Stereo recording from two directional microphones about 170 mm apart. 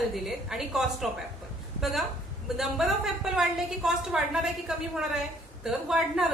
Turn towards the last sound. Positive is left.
turn(degrees=0)  # may be behind; listen again after turning